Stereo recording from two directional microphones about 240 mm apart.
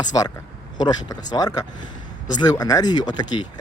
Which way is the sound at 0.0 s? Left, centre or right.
Centre.